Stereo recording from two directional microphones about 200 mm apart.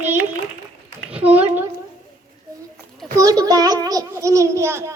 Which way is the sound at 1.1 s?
10° right (ahead or behind).